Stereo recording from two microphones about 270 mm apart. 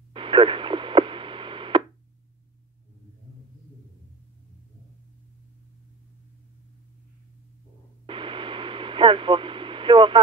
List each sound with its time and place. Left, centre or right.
0.1 s radio: centre
8.1 s radio: centre